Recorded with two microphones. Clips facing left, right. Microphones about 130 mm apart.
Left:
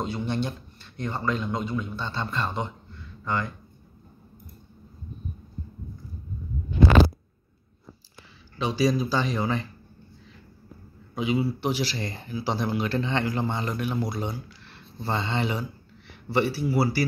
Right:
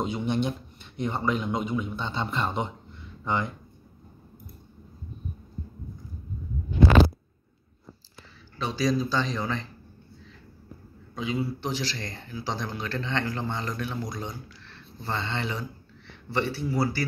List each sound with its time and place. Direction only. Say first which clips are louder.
0.0 s speech: right 1 dB; 15° right (ahead or behind)
8.5 s speech: left 2 dB; 10° left (ahead or behind)
11.1 s speech: left 4 dB; 10° left (ahead or behind)